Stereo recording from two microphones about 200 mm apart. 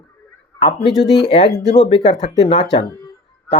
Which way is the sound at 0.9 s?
Centre (ahead or behind).